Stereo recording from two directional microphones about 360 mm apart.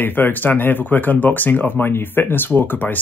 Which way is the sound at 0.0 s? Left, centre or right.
Centre.